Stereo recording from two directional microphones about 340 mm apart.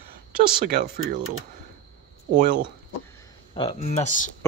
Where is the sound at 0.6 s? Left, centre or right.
Right.